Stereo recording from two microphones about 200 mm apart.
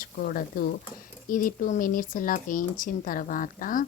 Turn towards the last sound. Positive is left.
turn(degrees=40)  # may be behind; listen again after turning